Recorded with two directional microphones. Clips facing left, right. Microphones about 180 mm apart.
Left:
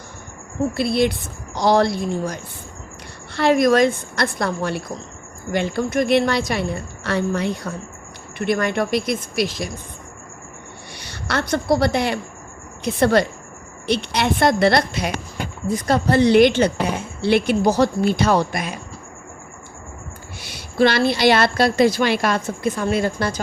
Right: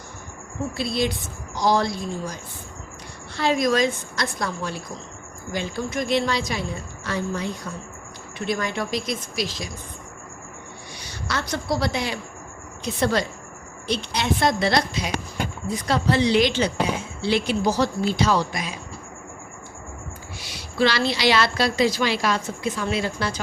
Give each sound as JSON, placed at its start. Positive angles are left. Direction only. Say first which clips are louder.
{"t": 0.8, "sound": "a woman's voice", "louder": "left 5 dB", "side_deg": 60}
{"t": 10.9, "sound": "a woman's voice", "louder": "left 5 dB", "side_deg": 65}
{"t": 20.4, "sound": "a woman's voice", "louder": "left 5 dB", "side_deg": 55}